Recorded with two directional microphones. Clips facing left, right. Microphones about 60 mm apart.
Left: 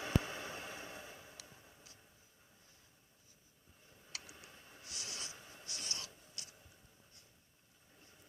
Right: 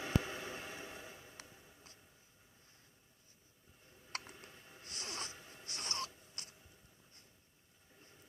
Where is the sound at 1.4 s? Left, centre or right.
Right.